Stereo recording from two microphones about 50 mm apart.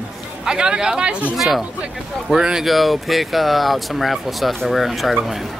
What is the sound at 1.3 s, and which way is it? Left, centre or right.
Speech, centre.